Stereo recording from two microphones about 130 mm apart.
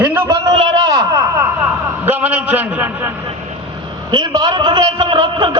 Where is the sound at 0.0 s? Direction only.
15° right (ahead or behind).